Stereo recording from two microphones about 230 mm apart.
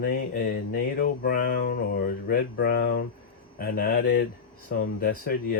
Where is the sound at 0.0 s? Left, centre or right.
Left.